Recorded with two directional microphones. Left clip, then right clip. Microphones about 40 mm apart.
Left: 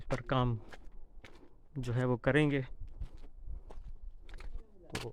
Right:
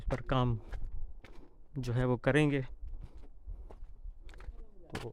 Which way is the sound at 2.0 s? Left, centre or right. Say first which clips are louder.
Right 1 dB; right.